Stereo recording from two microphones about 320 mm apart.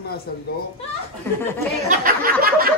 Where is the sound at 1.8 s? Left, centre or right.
Right.